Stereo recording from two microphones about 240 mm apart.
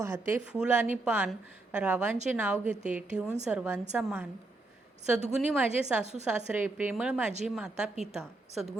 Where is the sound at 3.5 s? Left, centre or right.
Centre.